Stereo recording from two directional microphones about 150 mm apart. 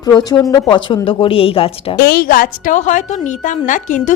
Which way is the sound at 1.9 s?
90° left.